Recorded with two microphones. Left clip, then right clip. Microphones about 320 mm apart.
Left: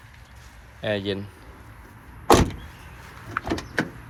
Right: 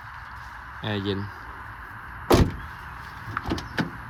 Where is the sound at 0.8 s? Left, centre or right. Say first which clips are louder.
Left 3 dB; centre.